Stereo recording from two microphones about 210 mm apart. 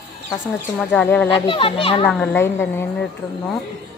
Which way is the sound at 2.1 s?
10° left (ahead or behind).